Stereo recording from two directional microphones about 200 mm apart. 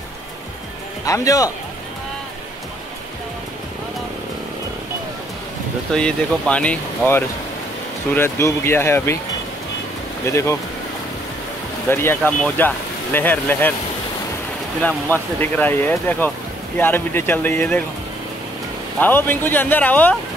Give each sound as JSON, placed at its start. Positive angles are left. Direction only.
{"t": 1.0, "sound": "speech", "side_deg": 15}
{"t": 5.9, "sound": "speech", "side_deg": 5}
{"t": 10.2, "sound": "speech", "side_deg": 15}
{"t": 11.9, "sound": "speech", "side_deg": 10}
{"t": 14.8, "sound": "speech", "side_deg": 5}
{"t": 18.9, "sound": "speech", "side_deg": 10}